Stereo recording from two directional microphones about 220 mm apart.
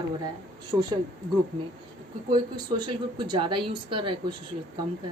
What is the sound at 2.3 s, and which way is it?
A woman's voice, 20° right (ahead or behind).